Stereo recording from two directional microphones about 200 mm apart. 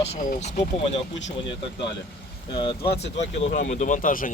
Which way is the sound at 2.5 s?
25° left (ahead or behind).